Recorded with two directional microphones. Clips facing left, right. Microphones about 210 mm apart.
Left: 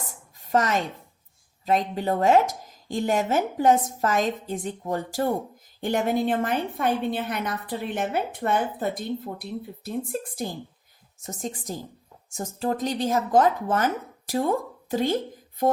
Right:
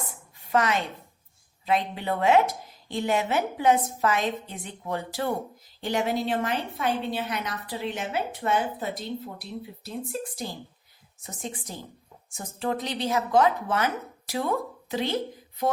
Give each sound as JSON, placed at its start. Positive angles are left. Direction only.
{"t": 0.1, "sound": "a sound", "side_deg": 40}
{"t": 1.6, "sound": "a woman's voice", "side_deg": 40}
{"t": 11.3, "sound": "a woman's voice", "side_deg": 40}